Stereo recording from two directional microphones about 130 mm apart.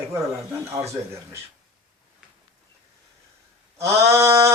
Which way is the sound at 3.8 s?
20° right (ahead or behind).